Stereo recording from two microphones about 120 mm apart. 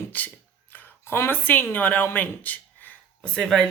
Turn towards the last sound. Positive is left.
turn(degrees=5)  # may be behind; listen again after turning